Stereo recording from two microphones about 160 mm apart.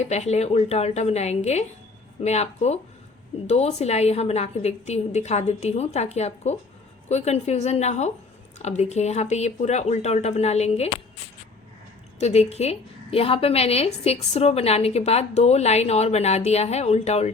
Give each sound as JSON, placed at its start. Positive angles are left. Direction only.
{"t": 0.0, "sound": "a woman's voice", "side_deg": 45}
{"t": 12.2, "sound": "a woman's voice", "side_deg": 40}